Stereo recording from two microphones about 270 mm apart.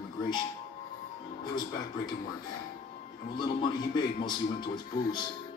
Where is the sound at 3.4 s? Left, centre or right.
Centre.